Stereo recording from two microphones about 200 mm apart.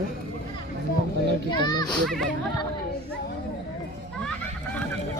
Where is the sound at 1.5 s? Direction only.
20° left (ahead or behind).